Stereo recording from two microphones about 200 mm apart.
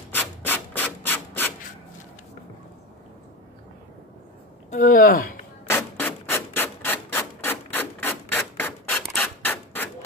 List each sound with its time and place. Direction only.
0.1 s rub: 10° left (ahead or behind)
4.6 s speech: 40° left (ahead or behind)
5.7 s rub: 10° left (ahead or behind)